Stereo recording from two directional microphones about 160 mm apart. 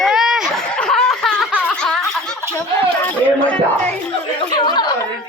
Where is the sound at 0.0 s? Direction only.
5° right (ahead or behind).